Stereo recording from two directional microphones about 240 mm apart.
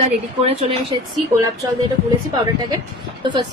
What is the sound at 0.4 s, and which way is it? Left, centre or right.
Speech, right.